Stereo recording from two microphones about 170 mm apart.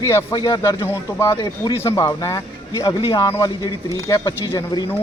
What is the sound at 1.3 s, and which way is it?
Speech, 30° left (ahead or behind).